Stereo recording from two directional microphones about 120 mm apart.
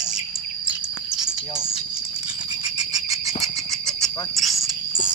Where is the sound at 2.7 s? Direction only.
30° right (ahead or behind).